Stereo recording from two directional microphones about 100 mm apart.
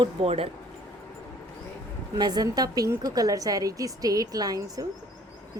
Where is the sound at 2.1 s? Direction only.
45° right (ahead or behind).